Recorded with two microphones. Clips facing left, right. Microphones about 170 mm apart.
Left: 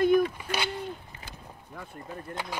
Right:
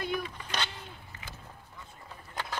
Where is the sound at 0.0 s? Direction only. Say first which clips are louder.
Left 12 dB; 50° left (ahead or behind).